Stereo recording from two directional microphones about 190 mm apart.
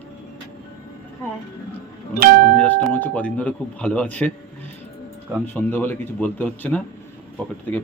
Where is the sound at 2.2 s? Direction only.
50° right (ahead or behind).